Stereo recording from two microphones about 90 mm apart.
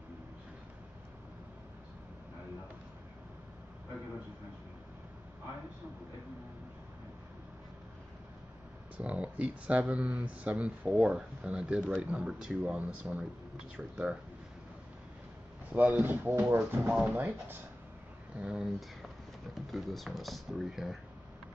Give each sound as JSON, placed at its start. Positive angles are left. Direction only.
{"t": 8.9, "sound": "speech", "side_deg": -15}
{"t": 15.7, "sound": "speech", "side_deg": -20}
{"t": 18.4, "sound": "speech", "side_deg": -10}